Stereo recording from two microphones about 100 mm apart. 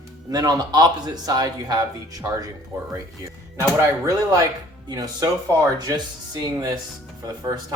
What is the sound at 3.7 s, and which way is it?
Speech, 30° right (ahead or behind).